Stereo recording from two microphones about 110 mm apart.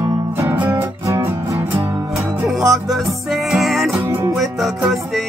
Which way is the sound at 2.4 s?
Centre (ahead or behind).